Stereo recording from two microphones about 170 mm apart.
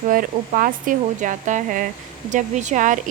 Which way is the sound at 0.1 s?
55° right (ahead or behind).